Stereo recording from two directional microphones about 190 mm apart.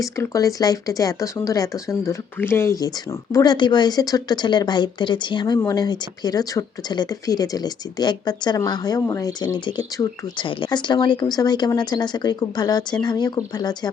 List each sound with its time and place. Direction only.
0.0 s speech: 15° left (ahead or behind)